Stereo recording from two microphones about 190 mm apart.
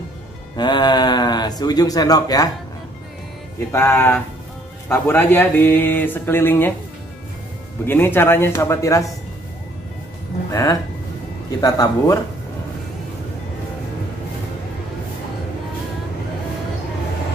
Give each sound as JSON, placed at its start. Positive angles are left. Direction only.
{"t": 0.6, "sound": "speech", "side_deg": 25}
{"t": 3.5, "sound": "speech", "side_deg": 15}
{"t": 7.8, "sound": "speech", "side_deg": 10}
{"t": 10.5, "sound": "speech", "side_deg": 20}